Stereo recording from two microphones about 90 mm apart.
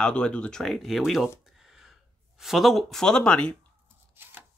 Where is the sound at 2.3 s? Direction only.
5° right (ahead or behind).